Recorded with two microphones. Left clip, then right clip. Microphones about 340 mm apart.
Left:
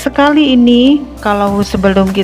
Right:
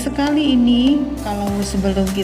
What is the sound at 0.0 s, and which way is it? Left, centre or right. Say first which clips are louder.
Speech: left 9 dB; centre.